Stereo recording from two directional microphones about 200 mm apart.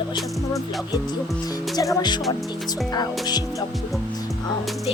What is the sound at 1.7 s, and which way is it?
Speech, 20° left (ahead or behind).